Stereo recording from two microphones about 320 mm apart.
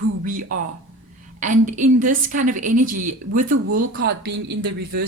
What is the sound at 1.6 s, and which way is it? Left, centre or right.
Speech, right.